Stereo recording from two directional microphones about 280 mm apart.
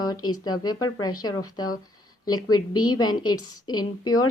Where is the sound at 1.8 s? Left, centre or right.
Centre.